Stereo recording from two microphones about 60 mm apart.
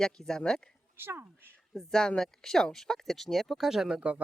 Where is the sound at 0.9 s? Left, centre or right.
Right.